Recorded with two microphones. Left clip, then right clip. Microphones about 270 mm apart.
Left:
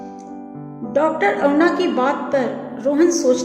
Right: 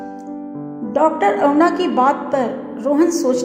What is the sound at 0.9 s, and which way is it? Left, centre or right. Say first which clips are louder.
A woman's voice: right 2 dB; right.